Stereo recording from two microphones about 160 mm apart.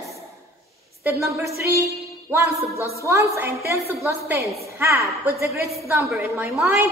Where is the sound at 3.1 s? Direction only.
15° right (ahead or behind).